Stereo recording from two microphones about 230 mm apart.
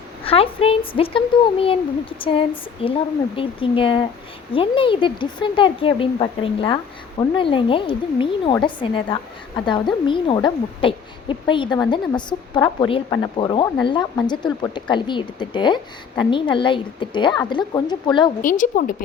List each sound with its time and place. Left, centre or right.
0.3 s a woman's voice: left
18.4 s speech: left